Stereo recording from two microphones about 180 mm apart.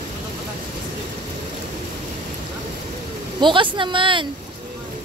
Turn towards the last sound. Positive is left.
turn(degrees=-25)  # may be behind; listen again after turning